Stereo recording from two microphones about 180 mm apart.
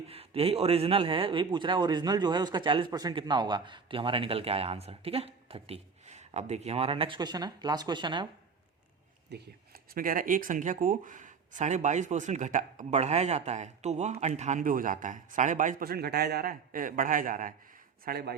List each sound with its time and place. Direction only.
0.1 s speech: 35° right (ahead or behind)
9.3 s speech: 55° right (ahead or behind)
18.0 s speech: 60° right (ahead or behind)